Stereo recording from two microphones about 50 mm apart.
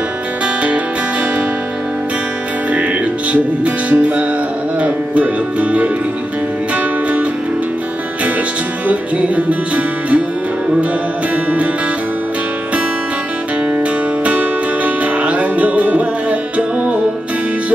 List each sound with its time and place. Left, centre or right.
2.7 s music: right
4.7 s speech: right
6.7 s music: right
8.8 s music: right
14.2 s music: right